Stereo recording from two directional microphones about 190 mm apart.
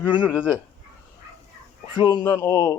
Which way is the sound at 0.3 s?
10° left (ahead or behind).